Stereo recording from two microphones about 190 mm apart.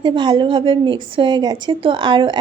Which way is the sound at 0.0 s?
25° right (ahead or behind).